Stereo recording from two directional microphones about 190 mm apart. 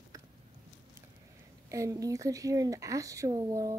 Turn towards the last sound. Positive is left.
turn(degrees=-20)  # may be behind; listen again after turning